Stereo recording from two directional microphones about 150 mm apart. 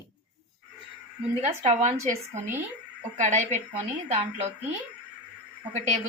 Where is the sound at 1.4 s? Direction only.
45° right (ahead or behind).